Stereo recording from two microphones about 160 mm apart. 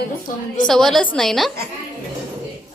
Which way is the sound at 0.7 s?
Centre (ahead or behind).